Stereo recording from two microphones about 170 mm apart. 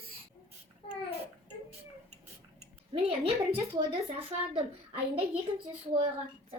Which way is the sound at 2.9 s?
35° right (ahead or behind).